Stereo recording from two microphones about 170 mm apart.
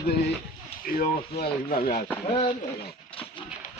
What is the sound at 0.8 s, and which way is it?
A man's voice, 60° left (ahead or behind).